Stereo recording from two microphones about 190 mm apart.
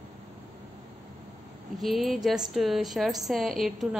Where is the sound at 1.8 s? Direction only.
Centre (ahead or behind).